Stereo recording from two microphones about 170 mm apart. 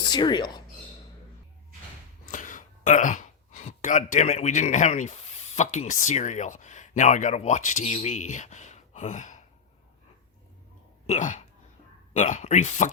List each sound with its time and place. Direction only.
0.0 s speech: 25° left (ahead or behind)
2.3 s speech: 50° left (ahead or behind)
11.0 s speech: 45° left (ahead or behind)